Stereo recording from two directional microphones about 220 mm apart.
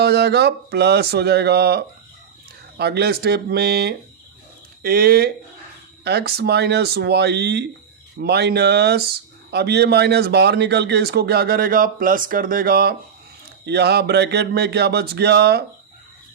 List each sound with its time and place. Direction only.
0.0 s speech: 50° right (ahead or behind)